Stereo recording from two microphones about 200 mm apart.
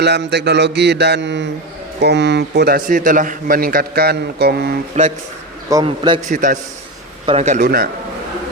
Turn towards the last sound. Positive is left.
turn(degrees=-50)  # may be behind; listen again after turning